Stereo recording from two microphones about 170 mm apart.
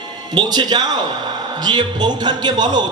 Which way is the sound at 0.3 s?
25° right (ahead or behind).